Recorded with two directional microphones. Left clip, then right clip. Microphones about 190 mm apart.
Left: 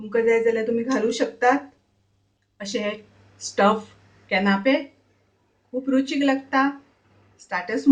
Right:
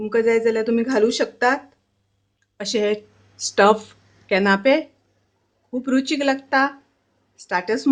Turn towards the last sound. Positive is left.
turn(degrees=-50)  # may be behind; listen again after turning